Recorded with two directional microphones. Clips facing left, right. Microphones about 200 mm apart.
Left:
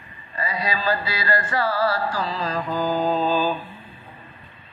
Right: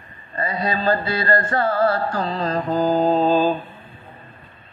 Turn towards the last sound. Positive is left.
turn(degrees=-25)  # may be behind; listen again after turning